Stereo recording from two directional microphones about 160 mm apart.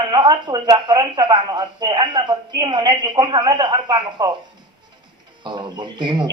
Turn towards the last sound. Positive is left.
turn(degrees=-30)  # may be behind; listen again after turning